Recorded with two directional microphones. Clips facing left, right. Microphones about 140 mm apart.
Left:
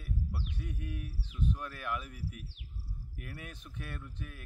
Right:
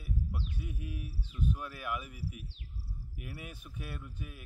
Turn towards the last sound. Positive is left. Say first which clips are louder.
# even
turn(degrees=-10)  # may be behind; listen again after turning